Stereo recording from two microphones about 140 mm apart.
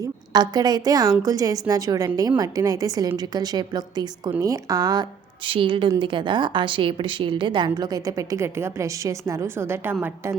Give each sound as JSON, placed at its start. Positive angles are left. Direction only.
{"t": 0.3, "sound": "a woman's voice", "side_deg": -30}
{"t": 5.5, "sound": "a woman's voice", "side_deg": -40}